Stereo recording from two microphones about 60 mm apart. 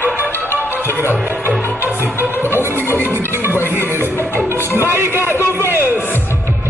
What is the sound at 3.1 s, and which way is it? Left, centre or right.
Speech, right.